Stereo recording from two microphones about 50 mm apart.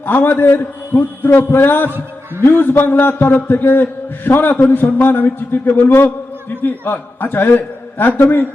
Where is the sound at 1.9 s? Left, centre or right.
Right.